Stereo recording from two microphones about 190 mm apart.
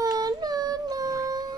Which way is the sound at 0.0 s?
20° right (ahead or behind).